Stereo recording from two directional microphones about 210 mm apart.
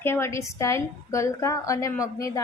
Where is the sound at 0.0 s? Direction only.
10° left (ahead or behind).